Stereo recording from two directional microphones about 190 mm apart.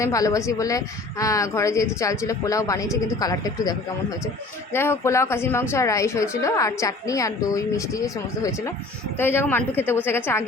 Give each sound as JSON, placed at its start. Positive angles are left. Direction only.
{"t": 0.0, "sound": "a woman's voice", "side_deg": 15}